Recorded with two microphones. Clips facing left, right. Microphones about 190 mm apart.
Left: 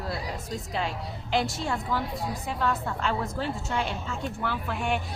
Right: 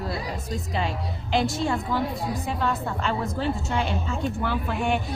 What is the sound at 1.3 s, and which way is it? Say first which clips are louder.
A woman's voice: right 4 dB; 5° left (ahead or behind).